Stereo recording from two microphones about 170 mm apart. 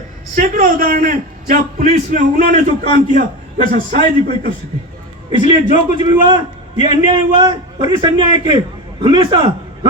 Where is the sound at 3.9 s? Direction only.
55° right (ahead or behind).